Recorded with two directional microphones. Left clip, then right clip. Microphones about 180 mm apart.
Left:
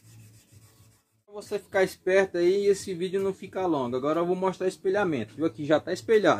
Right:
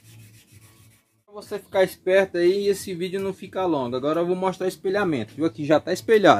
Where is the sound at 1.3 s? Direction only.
15° left (ahead or behind); by 4.7 s 10° right (ahead or behind).